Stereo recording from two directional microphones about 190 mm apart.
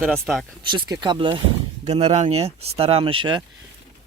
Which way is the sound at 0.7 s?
25° right (ahead or behind).